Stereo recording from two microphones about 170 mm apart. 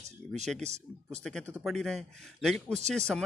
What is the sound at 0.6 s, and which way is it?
Speech, 40° right (ahead or behind).